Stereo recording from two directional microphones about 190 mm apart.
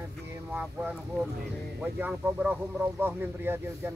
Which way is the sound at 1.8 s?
10° right (ahead or behind).